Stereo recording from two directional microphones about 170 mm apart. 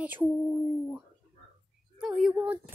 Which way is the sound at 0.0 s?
10° right (ahead or behind).